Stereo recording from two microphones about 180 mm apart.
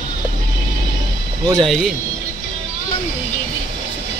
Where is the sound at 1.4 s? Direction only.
20° right (ahead or behind).